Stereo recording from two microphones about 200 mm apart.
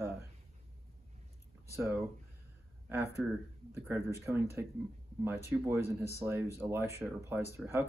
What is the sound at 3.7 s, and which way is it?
Speech, 10° right (ahead or behind).